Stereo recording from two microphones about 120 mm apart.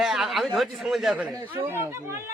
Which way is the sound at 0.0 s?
Centre (ahead or behind).